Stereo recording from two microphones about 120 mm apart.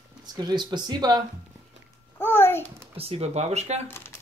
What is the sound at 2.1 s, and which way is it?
Babbling, 20° left (ahead or behind).